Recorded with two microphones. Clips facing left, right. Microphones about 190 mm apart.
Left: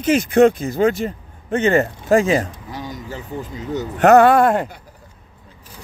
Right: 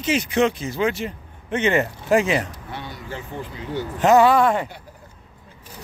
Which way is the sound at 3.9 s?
60° left (ahead or behind).